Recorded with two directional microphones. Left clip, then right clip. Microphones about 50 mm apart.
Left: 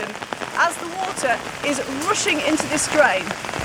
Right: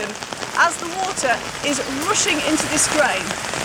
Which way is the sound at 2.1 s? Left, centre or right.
Left.